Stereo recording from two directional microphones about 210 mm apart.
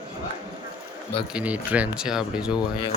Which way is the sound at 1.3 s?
5° right (ahead or behind).